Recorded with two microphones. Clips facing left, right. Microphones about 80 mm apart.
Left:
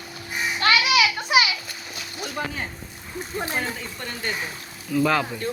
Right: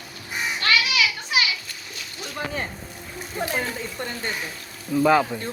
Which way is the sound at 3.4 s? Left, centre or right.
Centre.